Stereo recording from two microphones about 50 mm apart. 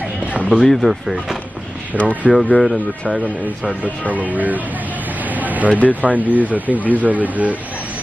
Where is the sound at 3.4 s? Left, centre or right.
Right.